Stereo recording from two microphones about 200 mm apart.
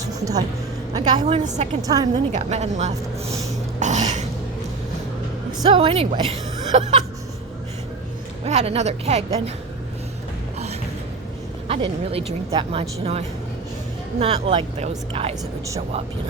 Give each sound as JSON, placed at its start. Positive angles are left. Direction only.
{"t": 0.0, "sound": "music", "side_deg": -15}
{"t": 0.9, "sound": "a woman's voice", "side_deg": -25}
{"t": 1.8, "sound": "a woman's voice", "side_deg": -20}
{"t": 2.3, "sound": "a woman's voice", "side_deg": -35}
{"t": 3.8, "sound": "a sound", "side_deg": -35}
{"t": 5.7, "sound": "a woman's voice", "side_deg": -30}
{"t": 8.4, "sound": "a woman's voice", "side_deg": -30}
{"t": 11.7, "sound": "a woman's voice", "side_deg": -30}